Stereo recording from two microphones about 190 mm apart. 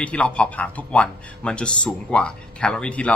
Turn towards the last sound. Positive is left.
turn(degrees=5)  # may be behind; listen again after turning